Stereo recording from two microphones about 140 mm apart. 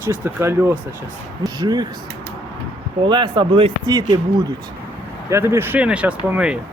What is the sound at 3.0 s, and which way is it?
Speech, 35° right (ahead or behind).